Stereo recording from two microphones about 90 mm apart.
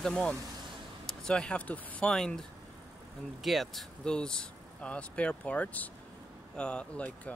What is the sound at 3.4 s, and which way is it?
Speech, centre (ahead or behind).